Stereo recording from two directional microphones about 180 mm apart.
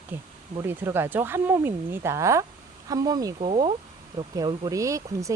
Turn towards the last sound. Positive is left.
turn(degrees=-15)  # may be behind; listen again after turning